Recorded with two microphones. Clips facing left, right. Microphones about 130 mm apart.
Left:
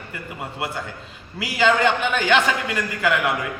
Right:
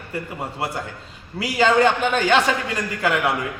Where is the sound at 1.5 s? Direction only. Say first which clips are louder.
Right 2 dB; 35° right (ahead or behind).